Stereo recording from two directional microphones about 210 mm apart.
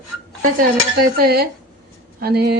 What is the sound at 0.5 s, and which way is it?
Speech, 45° right (ahead or behind).